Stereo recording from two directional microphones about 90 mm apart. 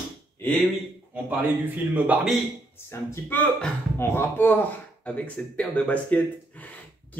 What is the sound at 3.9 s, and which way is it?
Speech, 25° left (ahead or behind).